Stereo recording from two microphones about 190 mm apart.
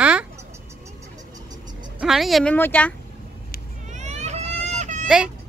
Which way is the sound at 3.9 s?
35° right (ahead or behind).